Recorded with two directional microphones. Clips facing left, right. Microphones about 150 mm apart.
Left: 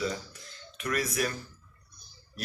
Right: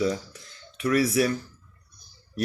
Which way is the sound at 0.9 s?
35° right (ahead or behind).